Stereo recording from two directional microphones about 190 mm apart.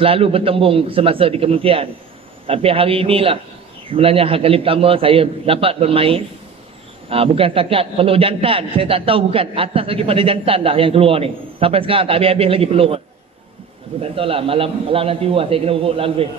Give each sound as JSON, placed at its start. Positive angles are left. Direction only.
{"t": 0.0, "sound": "a man's voice", "side_deg": -30}
{"t": 14.1, "sound": "a man's voice", "side_deg": -30}